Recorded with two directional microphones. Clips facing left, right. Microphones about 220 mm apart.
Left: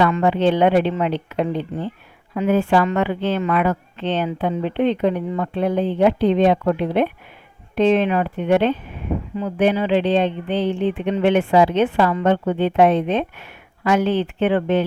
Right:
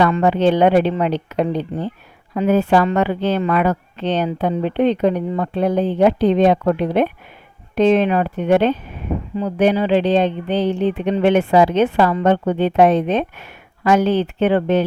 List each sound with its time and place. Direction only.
0.0 s speech: 40° right (ahead or behind)